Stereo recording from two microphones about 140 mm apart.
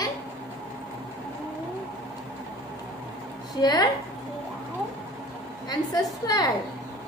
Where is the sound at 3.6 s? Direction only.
30° left (ahead or behind).